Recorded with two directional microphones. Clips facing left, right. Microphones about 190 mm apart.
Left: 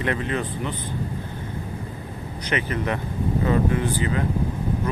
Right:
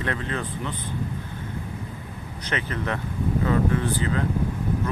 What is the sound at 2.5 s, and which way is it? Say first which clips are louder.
Speech: left 3 dB; 15° left (ahead or behind).